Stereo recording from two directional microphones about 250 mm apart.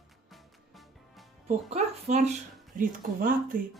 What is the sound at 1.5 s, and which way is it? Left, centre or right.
A woman's voice, right.